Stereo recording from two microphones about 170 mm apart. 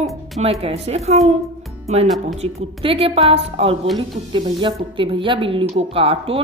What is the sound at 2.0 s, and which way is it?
Speech, centre (ahead or behind).